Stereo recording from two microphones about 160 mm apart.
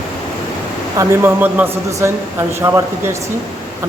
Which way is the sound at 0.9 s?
10° right (ahead or behind).